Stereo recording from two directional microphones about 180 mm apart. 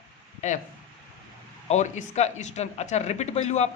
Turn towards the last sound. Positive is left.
turn(degrees=40)  # may be behind; listen again after turning